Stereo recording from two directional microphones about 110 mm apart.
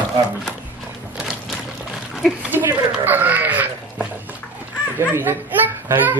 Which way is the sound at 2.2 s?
Centre (ahead or behind).